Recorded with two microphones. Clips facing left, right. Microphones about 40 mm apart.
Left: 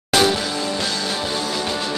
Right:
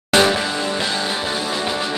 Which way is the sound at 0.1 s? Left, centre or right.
Right.